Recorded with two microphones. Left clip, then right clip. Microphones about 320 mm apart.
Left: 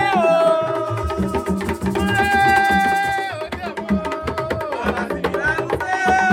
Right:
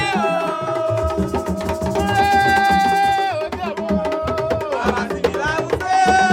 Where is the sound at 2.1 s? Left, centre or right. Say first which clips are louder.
Even; right.